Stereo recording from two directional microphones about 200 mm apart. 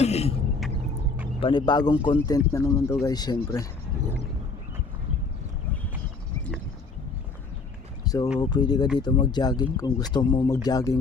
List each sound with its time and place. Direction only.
0.0 s throat clearing: 30° left (ahead or behind)
1.4 s a man's voice: 25° left (ahead or behind)
8.0 s a sound: 20° left (ahead or behind)
8.4 s speech: 20° left (ahead or behind)